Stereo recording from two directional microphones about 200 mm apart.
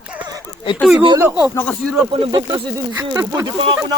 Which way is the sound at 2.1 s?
25° right (ahead or behind).